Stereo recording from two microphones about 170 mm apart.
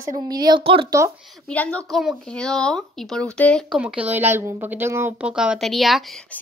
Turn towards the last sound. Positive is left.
turn(degrees=0)  # may be behind; listen again after turning